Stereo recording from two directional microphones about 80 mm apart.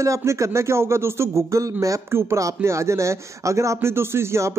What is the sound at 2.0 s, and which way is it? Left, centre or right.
Speech, right.